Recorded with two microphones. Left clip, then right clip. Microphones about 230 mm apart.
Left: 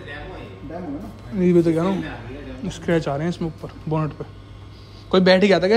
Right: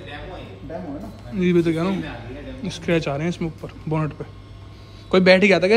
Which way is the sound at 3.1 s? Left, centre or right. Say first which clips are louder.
Left 1 dB; right.